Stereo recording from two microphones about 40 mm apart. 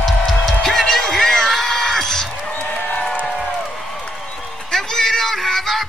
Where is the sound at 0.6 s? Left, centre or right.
Centre.